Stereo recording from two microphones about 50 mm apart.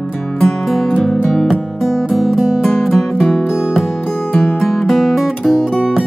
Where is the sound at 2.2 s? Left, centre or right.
Centre.